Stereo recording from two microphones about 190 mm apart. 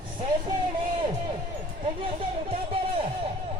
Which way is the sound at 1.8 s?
30° right (ahead or behind).